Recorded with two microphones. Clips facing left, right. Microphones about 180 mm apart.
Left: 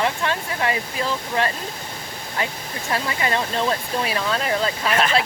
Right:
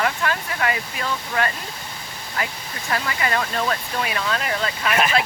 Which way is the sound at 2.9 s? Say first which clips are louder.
Left 1 dB; 25° left (ahead or behind).